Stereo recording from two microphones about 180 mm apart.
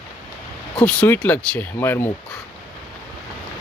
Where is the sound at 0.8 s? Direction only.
10° left (ahead or behind).